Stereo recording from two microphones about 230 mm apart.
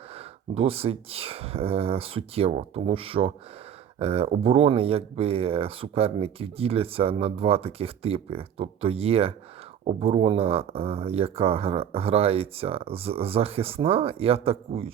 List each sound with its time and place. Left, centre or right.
0.5 s speech: right